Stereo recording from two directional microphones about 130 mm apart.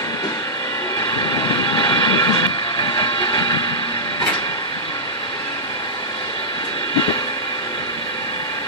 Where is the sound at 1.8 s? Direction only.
35° left (ahead or behind).